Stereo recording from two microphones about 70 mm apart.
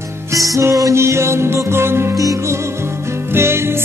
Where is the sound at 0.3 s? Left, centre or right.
Right.